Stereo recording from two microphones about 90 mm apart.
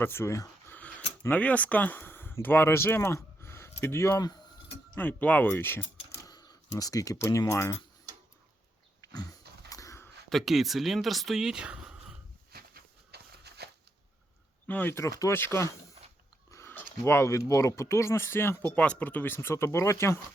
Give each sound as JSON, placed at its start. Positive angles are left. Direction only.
{"t": 0.0, "sound": "speech", "side_deg": 25}
{"t": 0.7, "sound": "a sound", "side_deg": 15}
{"t": 1.3, "sound": "speech", "side_deg": 15}
{"t": 6.2, "sound": "speech", "side_deg": 50}
{"t": 9.6, "sound": "a sound", "side_deg": 40}
{"t": 10.2, "sound": "speech", "side_deg": 0}
{"t": 14.7, "sound": "speech", "side_deg": 20}
{"t": 14.9, "sound": "speech", "side_deg": 35}
{"t": 18.6, "sound": "speech", "side_deg": 15}